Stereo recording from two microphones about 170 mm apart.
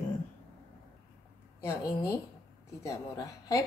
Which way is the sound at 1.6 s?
15° left (ahead or behind).